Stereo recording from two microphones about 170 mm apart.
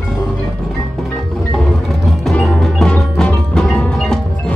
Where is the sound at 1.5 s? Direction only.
Centre (ahead or behind).